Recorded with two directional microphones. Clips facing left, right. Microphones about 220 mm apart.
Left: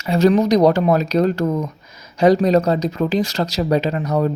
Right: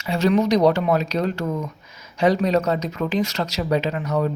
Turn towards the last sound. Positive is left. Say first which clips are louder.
# left 3 dB
turn(degrees=40)  # may be behind; listen again after turning